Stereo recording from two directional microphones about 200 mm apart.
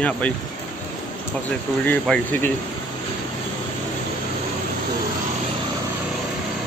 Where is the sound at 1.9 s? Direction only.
5° left (ahead or behind).